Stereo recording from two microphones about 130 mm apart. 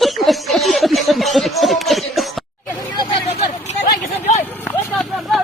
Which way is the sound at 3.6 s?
60° left (ahead or behind).